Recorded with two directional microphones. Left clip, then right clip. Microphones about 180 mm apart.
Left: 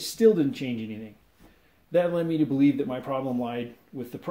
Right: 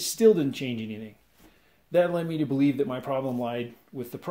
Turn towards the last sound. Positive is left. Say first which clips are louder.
# even
turn(degrees=-35)  # may be behind; listen again after turning